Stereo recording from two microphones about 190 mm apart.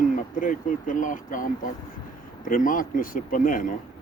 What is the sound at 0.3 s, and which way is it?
Speech, 45° left (ahead or behind).